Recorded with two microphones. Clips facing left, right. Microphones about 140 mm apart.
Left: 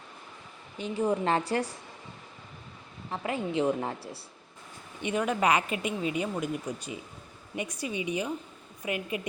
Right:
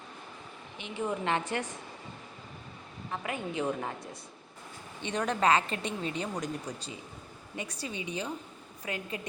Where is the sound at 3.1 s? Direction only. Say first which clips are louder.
Left 5 dB; 30° left (ahead or behind).